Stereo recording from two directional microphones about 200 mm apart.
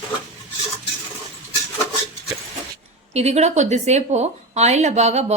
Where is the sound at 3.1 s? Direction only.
35° right (ahead or behind).